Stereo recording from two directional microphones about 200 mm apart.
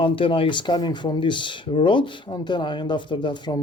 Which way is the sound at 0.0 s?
25° left (ahead or behind).